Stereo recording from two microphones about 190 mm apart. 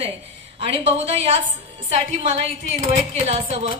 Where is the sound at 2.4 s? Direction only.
35° right (ahead or behind).